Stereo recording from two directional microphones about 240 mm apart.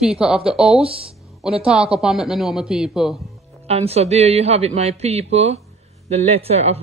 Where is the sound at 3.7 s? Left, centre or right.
Right.